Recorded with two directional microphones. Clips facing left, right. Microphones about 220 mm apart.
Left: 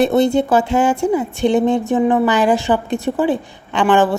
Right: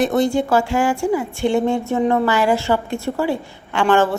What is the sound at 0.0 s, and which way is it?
A woman's voice, 25° left (ahead or behind).